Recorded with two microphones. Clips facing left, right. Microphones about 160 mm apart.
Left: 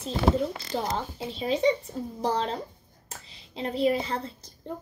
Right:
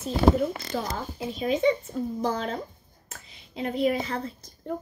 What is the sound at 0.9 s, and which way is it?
A woman's voice, 30° left (ahead or behind).